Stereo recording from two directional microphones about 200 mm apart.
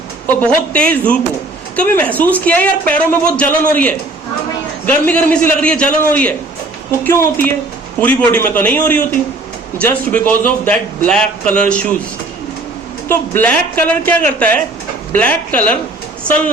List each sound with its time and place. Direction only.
0.4 s speech: 5° left (ahead or behind)
5.0 s speech: 10° left (ahead or behind)
13.1 s speech: 10° left (ahead or behind)